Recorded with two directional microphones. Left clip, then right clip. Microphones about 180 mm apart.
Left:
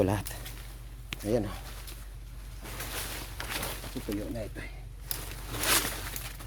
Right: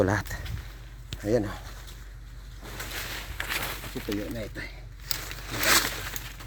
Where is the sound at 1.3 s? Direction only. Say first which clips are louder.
Right 4 dB; 50° right (ahead or behind).